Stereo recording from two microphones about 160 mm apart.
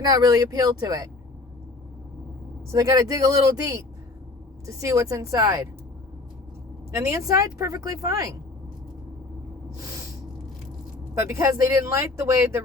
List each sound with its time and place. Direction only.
0.0 s speech: 25° right (ahead or behind)
2.7 s speech: 20° right (ahead or behind)
6.9 s speech: 20° right (ahead or behind)
11.1 s speech: 15° right (ahead or behind)